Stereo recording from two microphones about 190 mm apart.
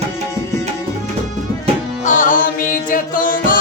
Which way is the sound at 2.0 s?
45° left (ahead or behind).